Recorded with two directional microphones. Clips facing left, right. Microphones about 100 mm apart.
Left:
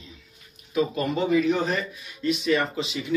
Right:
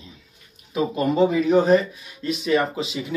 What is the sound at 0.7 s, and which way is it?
Speech, 30° right (ahead or behind).